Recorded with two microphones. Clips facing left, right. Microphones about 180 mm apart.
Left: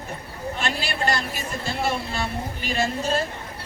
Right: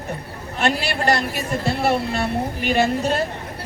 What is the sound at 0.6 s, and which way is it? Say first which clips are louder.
Speech: right 7 dB; 65° right (ahead or behind).